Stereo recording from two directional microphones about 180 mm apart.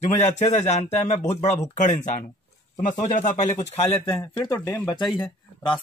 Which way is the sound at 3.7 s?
30° left (ahead or behind).